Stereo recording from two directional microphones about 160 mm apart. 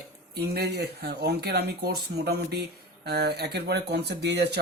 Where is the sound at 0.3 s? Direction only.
80° right.